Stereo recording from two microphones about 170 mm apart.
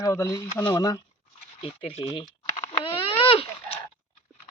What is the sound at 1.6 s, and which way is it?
Speech, 30° left (ahead or behind).